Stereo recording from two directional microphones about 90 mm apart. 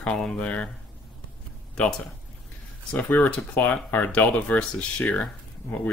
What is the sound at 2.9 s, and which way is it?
Speech, 15° left (ahead or behind).